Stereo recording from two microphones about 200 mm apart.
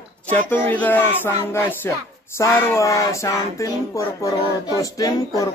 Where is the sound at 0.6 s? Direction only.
10° left (ahead or behind).